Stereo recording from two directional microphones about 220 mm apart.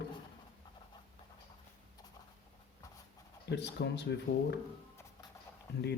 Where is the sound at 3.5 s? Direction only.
50° left (ahead or behind).